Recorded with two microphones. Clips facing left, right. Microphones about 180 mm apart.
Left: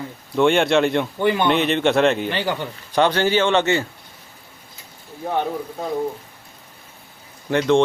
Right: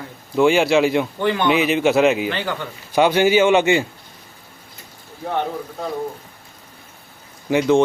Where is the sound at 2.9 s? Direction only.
10° right (ahead or behind).